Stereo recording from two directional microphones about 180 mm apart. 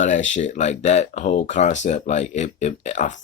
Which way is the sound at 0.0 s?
45° left (ahead or behind).